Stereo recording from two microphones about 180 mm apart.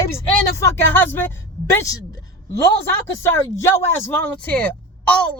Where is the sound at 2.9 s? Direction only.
15° left (ahead or behind).